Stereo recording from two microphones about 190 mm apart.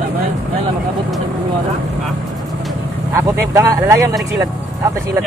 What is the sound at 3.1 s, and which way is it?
Speech, 15° right (ahead or behind).